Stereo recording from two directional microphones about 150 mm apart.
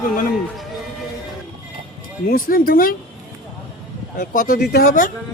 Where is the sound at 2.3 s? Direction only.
75° left (ahead or behind).